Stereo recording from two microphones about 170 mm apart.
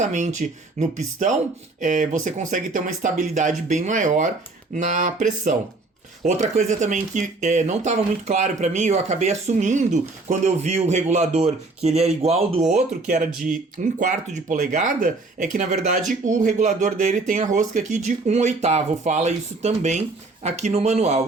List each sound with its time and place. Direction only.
0.0 s speech: 45° right (ahead or behind)